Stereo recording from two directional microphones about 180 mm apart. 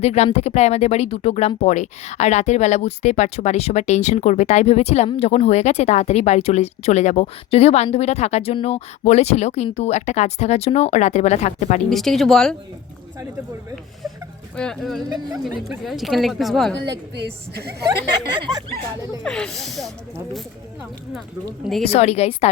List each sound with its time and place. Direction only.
0.0 s speech: 35° left (ahead or behind)
11.9 s speech: centre (ahead or behind)
14.5 s speech: 5° left (ahead or behind)
16.7 s a woman's voice: 75° right (ahead or behind)
19.2 s speech: 5° left (ahead or behind)
21.6 s speech: centre (ahead or behind)
21.8 s speech: 35° left (ahead or behind)